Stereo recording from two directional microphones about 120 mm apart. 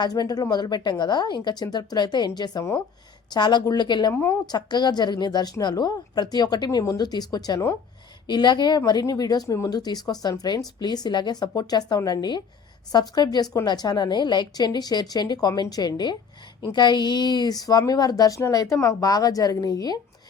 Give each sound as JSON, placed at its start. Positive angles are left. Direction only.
{"t": 0.0, "sound": "speech", "side_deg": 35}
{"t": 4.1, "sound": "a woman's voice", "side_deg": 20}
{"t": 4.4, "sound": "speech", "side_deg": 35}